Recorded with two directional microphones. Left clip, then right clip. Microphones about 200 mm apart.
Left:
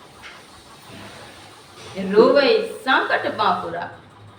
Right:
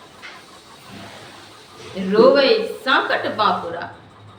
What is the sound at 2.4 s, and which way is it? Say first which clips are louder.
A woman's voice: right 1 dB; 10° right (ahead or behind).